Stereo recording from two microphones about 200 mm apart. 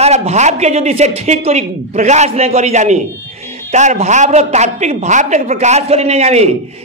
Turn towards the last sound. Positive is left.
turn(degrees=-35)  # may be behind; listen again after turning